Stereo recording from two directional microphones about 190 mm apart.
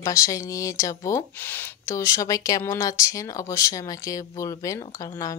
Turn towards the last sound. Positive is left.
turn(degrees=15)  # may be behind; listen again after turning